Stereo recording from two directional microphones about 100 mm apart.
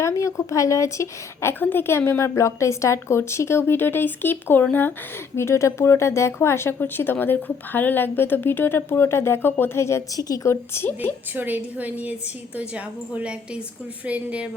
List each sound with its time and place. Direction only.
0.0 s speech: 30° left (ahead or behind)
11.3 s a woman's voice: 15° right (ahead or behind)